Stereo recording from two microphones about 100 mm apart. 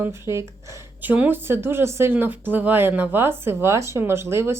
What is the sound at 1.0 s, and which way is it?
A woman's voice, 15° right (ahead or behind).